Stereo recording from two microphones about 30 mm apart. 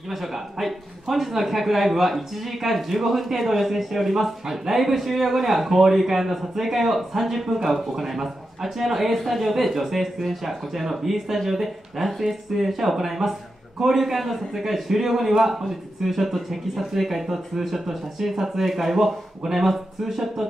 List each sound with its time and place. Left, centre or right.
0.1 s speech: centre